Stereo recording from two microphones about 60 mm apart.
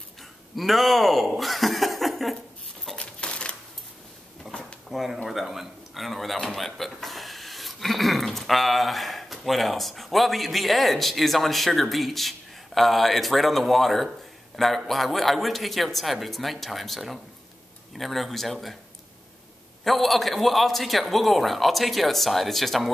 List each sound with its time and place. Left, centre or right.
0.6 s a man's voice: centre
3.0 s a sound: centre
4.5 s drawer open or close: centre
4.8 s a man's voice: centre
19.8 s a man's voice: centre